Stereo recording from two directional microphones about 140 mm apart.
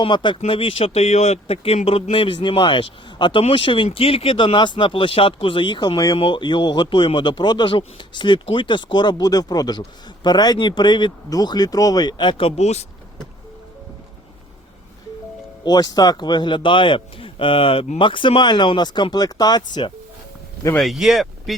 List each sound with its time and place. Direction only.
0.0 s speech: 35° left (ahead or behind); by 12.8 s 50° left (ahead or behind)
15.6 s speech: 30° left (ahead or behind)
20.7 s speech: centre (ahead or behind)